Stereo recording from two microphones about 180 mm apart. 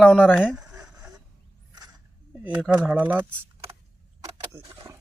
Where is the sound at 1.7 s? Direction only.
20° right (ahead or behind).